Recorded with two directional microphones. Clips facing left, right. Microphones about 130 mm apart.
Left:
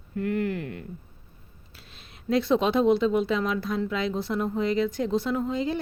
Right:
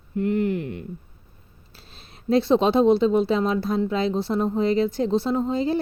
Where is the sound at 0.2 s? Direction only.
20° right (ahead or behind).